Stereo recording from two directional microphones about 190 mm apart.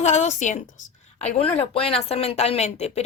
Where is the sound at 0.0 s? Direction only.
35° left (ahead or behind).